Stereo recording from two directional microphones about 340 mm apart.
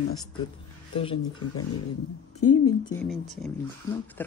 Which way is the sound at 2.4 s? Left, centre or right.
Left.